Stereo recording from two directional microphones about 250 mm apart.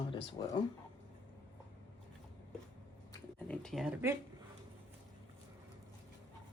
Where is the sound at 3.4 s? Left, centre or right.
Centre.